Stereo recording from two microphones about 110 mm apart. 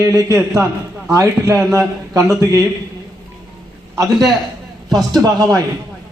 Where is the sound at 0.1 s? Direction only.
30° right (ahead or behind).